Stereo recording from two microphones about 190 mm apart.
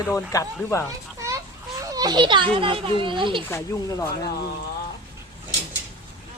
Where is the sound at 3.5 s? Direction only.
15° left (ahead or behind).